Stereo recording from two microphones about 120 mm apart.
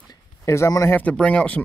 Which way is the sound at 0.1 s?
25° left (ahead or behind).